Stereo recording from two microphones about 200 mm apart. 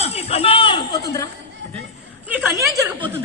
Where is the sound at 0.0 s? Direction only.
30° left (ahead or behind).